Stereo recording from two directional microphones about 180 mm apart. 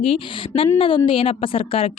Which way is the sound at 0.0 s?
30° left (ahead or behind).